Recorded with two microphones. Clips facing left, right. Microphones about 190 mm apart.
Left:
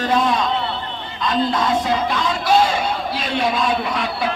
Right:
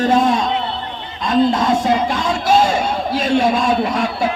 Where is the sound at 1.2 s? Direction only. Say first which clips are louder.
Right 5 dB; 45° right (ahead or behind).